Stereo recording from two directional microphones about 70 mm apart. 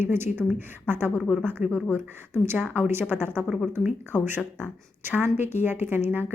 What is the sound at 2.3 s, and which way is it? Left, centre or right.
A woman's voice, right.